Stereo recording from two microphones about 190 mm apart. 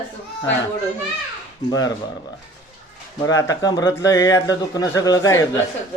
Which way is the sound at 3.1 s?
20° left (ahead or behind).